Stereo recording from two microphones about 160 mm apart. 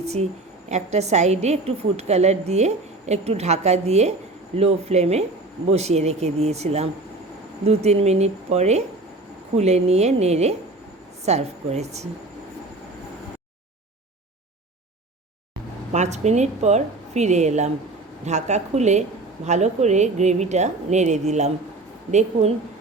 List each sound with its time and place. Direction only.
0.0 s a woman's voice: 40° right (ahead or behind)
15.9 s a woman's voice: 45° right (ahead or behind)